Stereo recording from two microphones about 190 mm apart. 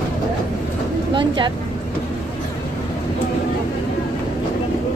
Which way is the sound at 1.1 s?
25° right (ahead or behind).